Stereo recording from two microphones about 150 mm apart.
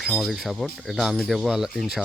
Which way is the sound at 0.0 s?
Centre (ahead or behind).